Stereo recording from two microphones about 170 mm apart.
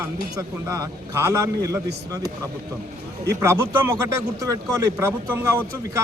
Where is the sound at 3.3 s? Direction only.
15° right (ahead or behind).